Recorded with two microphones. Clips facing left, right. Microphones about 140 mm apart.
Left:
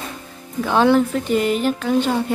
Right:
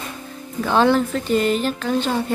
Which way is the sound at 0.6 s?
10° left (ahead or behind).